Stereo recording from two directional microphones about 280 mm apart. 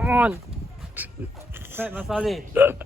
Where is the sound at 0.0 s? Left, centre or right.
Centre.